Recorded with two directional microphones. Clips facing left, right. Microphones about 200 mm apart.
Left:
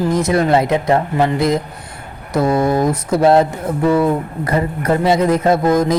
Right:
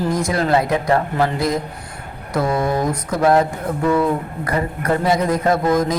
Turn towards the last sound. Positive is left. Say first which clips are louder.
# left 3 dB
turn(degrees=25)  # may be behind; listen again after turning